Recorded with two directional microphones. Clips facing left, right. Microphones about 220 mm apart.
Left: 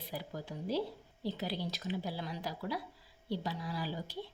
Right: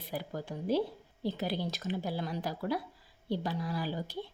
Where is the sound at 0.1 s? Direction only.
50° right (ahead or behind).